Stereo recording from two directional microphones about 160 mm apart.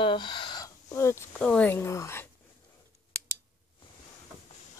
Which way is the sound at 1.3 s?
5° left (ahead or behind).